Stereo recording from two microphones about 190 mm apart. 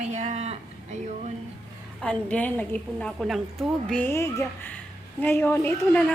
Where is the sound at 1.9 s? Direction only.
5° left (ahead or behind).